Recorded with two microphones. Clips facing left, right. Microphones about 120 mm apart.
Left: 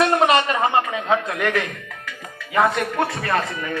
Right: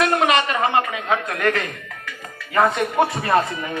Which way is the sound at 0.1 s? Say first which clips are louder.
Left 1 dB; 30° left (ahead or behind).